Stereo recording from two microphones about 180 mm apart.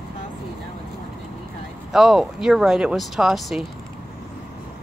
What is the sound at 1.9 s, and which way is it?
Speech, centre (ahead or behind).